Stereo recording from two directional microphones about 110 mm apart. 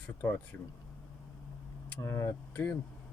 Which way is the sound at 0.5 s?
15° left (ahead or behind).